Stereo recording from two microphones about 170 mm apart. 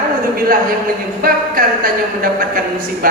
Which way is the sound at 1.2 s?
55° right (ahead or behind).